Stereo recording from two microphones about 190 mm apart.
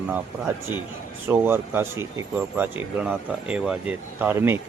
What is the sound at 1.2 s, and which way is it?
Speech, 10° right (ahead or behind).